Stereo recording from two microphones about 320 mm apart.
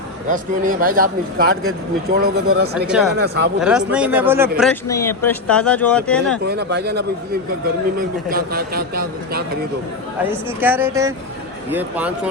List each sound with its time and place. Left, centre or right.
0.3 s a man's voice: right
2.8 s speech: centre
3.2 s speech: right
3.6 s speech: centre
6.5 s a man's voice: right
10.2 s speech: centre